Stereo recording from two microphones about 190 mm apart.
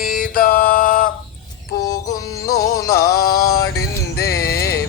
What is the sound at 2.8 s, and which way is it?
Music, 50° left (ahead or behind).